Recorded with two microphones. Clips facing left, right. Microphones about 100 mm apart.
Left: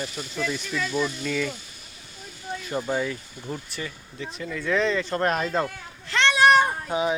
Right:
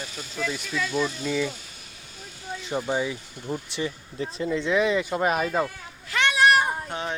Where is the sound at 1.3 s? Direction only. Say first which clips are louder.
Right 1 dB; 15° right (ahead or behind).